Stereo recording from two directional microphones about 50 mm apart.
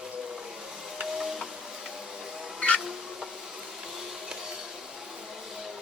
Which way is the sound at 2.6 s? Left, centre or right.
Left.